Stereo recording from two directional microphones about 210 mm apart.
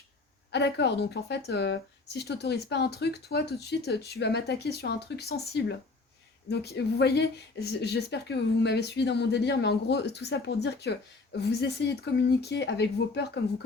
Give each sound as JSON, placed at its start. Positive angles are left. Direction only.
{"t": 0.5, "sound": "speech", "side_deg": 55}